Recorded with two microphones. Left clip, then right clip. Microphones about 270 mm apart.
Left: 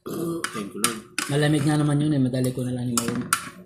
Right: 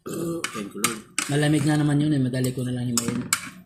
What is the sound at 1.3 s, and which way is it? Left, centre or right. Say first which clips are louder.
Speech: even; right.